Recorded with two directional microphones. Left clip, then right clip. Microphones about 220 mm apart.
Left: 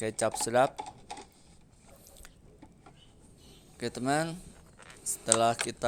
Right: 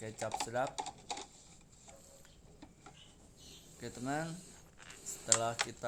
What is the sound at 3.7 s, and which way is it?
Speech, 40° left (ahead or behind).